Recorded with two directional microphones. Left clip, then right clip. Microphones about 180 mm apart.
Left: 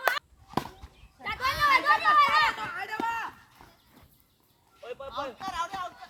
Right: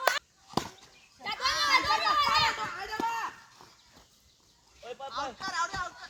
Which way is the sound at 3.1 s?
10° left (ahead or behind).